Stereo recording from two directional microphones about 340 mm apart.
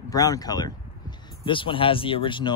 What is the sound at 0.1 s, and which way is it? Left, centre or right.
Speech, centre.